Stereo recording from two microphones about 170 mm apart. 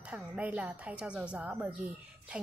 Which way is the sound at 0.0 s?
10° right (ahead or behind).